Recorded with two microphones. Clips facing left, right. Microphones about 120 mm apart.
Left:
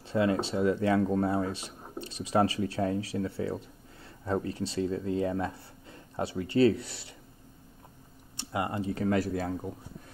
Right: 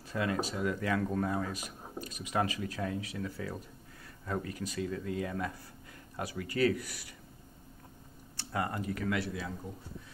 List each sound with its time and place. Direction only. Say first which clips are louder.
0.1 s speech: left 6 dB; 30° left (ahead or behind)
8.4 s speech: left 3 dB; 20° left (ahead or behind); by 9.5 s 45° left (ahead or behind)